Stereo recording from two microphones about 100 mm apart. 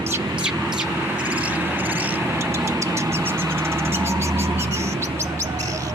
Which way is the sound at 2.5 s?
30° right (ahead or behind).